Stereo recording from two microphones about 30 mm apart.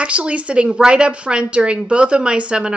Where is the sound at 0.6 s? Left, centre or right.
Right.